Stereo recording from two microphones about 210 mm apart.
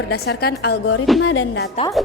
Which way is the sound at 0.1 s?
50° left (ahead or behind).